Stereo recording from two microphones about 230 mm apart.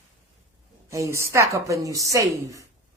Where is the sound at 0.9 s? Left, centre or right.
Centre.